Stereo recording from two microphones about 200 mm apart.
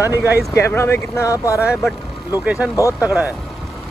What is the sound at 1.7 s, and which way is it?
Speech, 5° right (ahead or behind).